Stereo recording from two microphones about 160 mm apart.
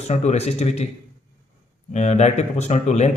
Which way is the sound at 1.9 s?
45° left (ahead or behind).